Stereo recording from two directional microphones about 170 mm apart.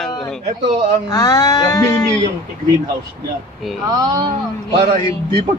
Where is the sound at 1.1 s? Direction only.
20° left (ahead or behind).